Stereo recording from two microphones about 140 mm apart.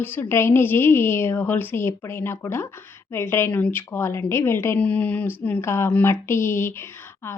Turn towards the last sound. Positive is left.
turn(degrees=20)  # may be behind; listen again after turning